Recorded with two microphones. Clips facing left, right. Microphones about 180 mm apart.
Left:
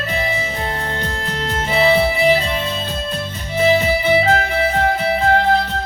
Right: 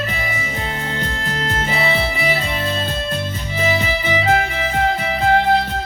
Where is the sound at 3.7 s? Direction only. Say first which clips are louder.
Left 6 dB; 40° left (ahead or behind).